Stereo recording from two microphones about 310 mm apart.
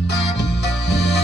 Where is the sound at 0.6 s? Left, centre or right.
Left.